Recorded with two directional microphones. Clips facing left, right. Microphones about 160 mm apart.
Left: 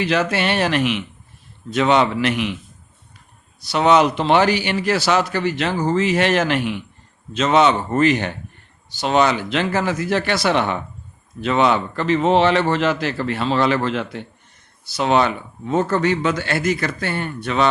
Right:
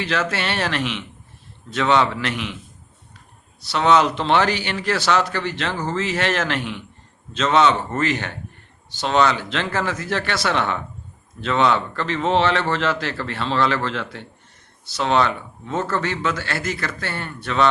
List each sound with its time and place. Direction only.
0.0 s speech: 15° left (ahead or behind)
3.6 s speech: 15° left (ahead or behind)